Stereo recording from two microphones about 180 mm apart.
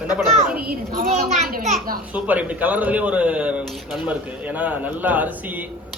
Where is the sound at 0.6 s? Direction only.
50° right (ahead or behind).